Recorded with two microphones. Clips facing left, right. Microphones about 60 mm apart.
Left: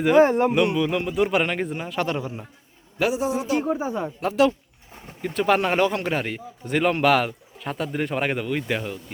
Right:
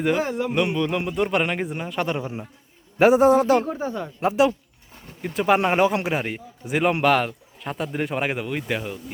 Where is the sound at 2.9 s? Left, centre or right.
Right.